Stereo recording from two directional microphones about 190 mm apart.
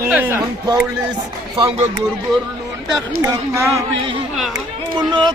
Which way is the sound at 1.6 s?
30° right (ahead or behind).